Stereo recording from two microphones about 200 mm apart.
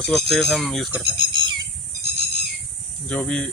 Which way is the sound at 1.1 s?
25° right (ahead or behind).